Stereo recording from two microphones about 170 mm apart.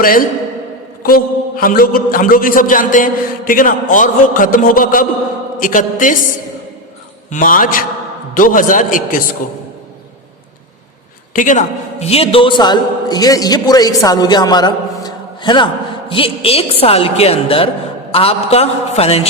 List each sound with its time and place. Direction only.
0.0 s a man's voice: 55° left (ahead or behind)
7.3 s a man's voice: 50° left (ahead or behind)
11.3 s a man's voice: 50° left (ahead or behind)